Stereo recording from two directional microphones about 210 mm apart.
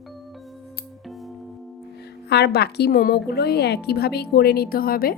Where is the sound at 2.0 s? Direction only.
50° left (ahead or behind).